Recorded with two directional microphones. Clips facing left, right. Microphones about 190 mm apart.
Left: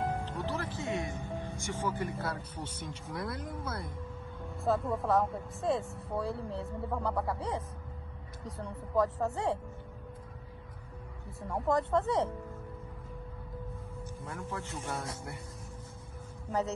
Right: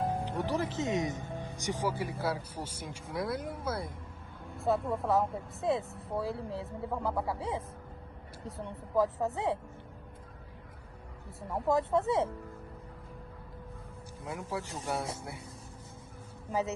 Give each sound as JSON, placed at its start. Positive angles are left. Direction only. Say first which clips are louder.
{"t": 0.2, "sound": "speech", "louder": "right 4 dB", "side_deg": -15}
{"t": 11.4, "sound": "speech", "louder": "right 1 dB", "side_deg": 0}
{"t": 14.2, "sound": "speech", "louder": "right 4 dB", "side_deg": -10}